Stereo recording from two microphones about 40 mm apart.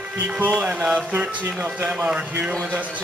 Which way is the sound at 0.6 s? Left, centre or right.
Right.